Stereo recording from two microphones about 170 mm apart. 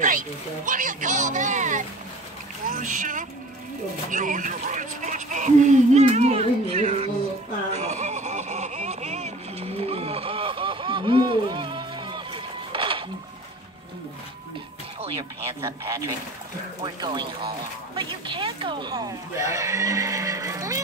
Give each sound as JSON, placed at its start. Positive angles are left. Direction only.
{"t": 0.7, "sound": "speech", "side_deg": -50}
{"t": 4.1, "sound": "a sound", "side_deg": -50}
{"t": 7.7, "sound": "vehicle", "side_deg": -40}
{"t": 15.6, "sound": "speech", "side_deg": -20}